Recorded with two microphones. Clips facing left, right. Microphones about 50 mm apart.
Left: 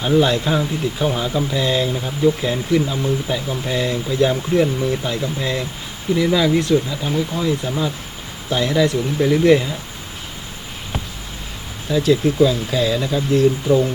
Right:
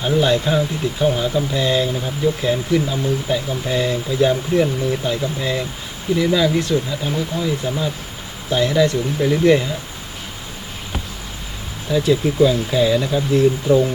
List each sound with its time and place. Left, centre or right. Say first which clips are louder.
0.0 s speech: left 1 dB; centre
11.9 s speech: left 1 dB; centre